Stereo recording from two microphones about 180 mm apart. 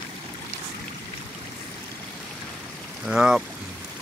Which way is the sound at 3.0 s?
5° right (ahead or behind).